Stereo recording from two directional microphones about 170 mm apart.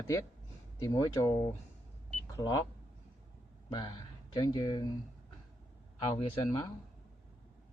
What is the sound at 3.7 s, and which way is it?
Speech, 25° left (ahead or behind).